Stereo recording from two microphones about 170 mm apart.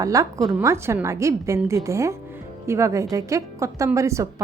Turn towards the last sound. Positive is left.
turn(degrees=-15)  # may be behind; listen again after turning